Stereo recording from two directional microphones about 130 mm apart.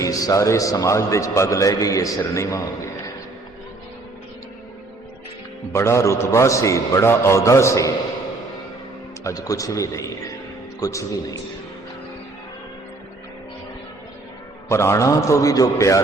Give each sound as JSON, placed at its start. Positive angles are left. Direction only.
{"t": 0.0, "sound": "a man's voice", "side_deg": 25}
{"t": 5.7, "sound": "a man's voice", "side_deg": 20}
{"t": 9.2, "sound": "a man's voice", "side_deg": 25}
{"t": 14.7, "sound": "a man's voice", "side_deg": 20}